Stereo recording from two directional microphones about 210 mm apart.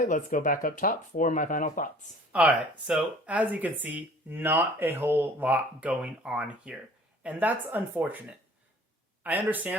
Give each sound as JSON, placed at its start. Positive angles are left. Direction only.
{"t": 0.0, "sound": "speech", "side_deg": 40}
{"t": 2.3, "sound": "speech", "side_deg": -5}